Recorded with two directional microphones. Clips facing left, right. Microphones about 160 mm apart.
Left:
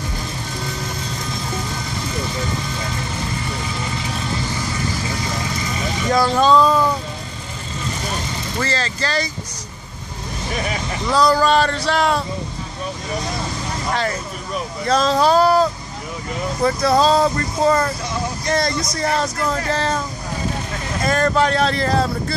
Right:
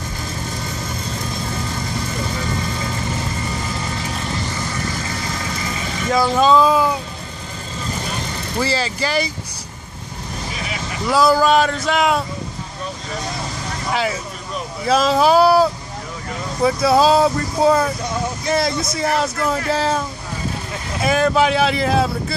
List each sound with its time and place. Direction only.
6.0 s a sound: 5° right (ahead or behind)
8.5 s speech: 10° right (ahead or behind)
11.1 s speech: 5° right (ahead or behind)
13.9 s speech: 5° right (ahead or behind)
21.0 s speech: 5° right (ahead or behind)